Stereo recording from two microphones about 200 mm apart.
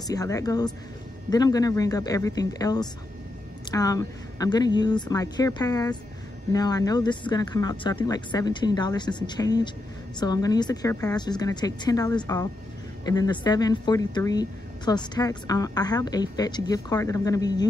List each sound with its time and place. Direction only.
0.0 s speech: 20° left (ahead or behind)